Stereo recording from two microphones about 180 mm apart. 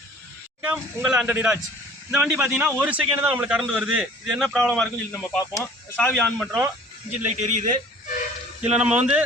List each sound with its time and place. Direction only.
0.6 s a man's voice: 5° right (ahead or behind)
7.3 s a man's voice: 40° right (ahead or behind)
8.7 s speech: 5° right (ahead or behind)